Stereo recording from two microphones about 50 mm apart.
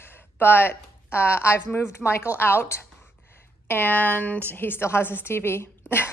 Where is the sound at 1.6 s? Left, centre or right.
Left.